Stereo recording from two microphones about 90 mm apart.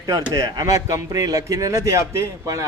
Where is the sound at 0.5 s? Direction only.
40° right (ahead or behind).